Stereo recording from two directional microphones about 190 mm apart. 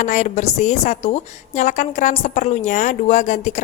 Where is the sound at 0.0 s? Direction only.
40° left (ahead or behind).